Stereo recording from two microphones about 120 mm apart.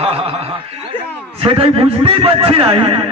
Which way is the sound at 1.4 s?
50° right (ahead or behind).